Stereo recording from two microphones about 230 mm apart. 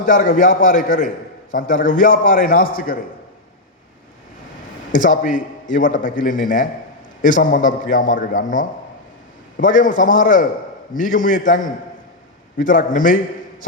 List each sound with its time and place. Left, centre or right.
0.0 s a man's voice: left
4.9 s a man's voice: left